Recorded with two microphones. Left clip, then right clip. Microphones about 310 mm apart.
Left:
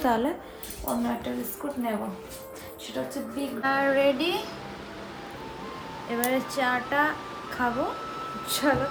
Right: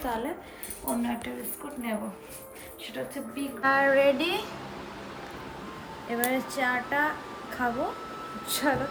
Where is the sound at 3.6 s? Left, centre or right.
Centre.